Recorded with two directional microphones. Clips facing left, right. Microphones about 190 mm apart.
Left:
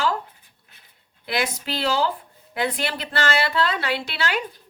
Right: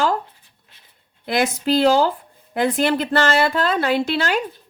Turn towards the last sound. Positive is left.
turn(degrees=-45)  # may be behind; listen again after turning